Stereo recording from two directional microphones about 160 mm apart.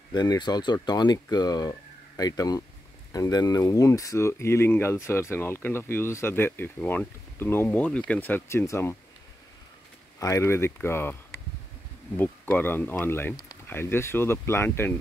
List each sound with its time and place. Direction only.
0.1 s speech: 25° left (ahead or behind)
10.1 s speech: 20° left (ahead or behind)